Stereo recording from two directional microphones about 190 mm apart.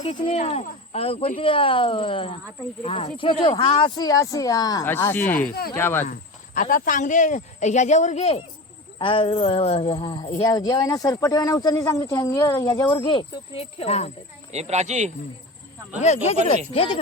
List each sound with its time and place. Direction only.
0.0 s speech: 25° left (ahead or behind); by 6.1 s 10° left (ahead or behind)
6.1 s speech: 45° left (ahead or behind)
14.5 s speech: 35° right (ahead or behind)
16.0 s speech: 40° left (ahead or behind)